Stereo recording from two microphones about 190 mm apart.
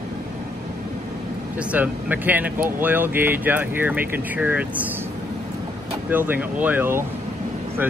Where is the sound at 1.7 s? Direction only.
10° right (ahead or behind).